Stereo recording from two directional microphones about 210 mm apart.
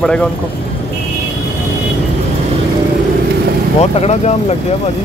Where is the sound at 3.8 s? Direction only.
30° left (ahead or behind).